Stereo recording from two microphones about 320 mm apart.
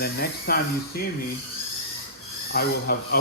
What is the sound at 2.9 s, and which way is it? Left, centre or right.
Speech, left.